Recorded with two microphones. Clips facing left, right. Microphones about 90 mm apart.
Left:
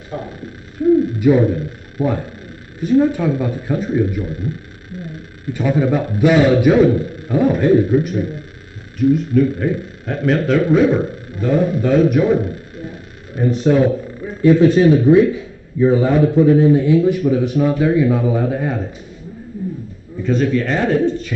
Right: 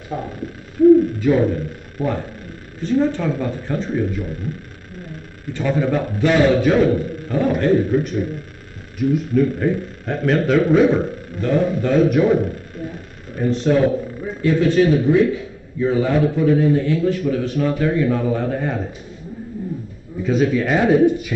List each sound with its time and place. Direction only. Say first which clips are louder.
0.1 s speech: even; 10° right (ahead or behind)
1.2 s a man's voice: left 3 dB; 10° left (ahead or behind)
5.5 s a man's voice: left 3 dB; 10° left (ahead or behind)
13.4 s a man's voice: left 2 dB; 10° left (ahead or behind)
14.4 s a man's voice: left 5 dB; 20° left (ahead or behind)
20.2 s speech: left 1 dB; 5° right (ahead or behind)